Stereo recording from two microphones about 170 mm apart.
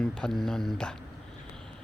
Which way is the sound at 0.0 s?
5° left (ahead or behind).